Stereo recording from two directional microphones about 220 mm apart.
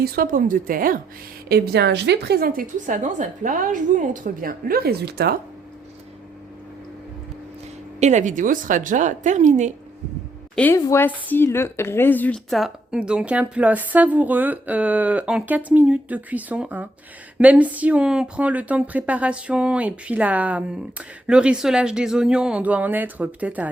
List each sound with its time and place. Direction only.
0.0 s a woman's voice: 40° right (ahead or behind)
7.9 s a woman's voice: 30° right (ahead or behind)
10.5 s a woman's voice: 10° left (ahead or behind)